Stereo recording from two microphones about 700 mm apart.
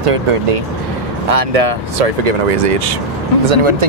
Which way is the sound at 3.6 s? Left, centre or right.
Right.